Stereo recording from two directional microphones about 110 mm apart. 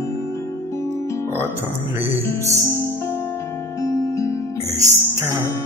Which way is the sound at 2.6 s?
25° left (ahead or behind).